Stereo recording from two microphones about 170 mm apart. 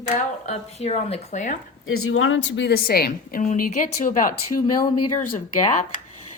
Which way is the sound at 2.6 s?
70° left (ahead or behind).